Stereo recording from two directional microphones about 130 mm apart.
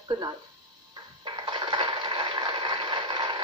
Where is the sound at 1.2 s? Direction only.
35° right (ahead or behind).